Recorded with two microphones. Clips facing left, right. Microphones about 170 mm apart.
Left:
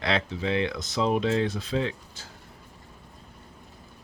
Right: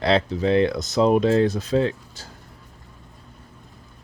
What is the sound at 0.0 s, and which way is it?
Speech, 35° right (ahead or behind).